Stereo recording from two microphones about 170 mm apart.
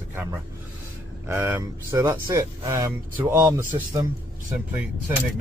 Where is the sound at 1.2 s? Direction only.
15° right (ahead or behind).